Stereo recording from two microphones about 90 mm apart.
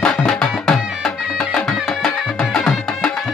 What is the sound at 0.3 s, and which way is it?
Music, 5° left (ahead or behind).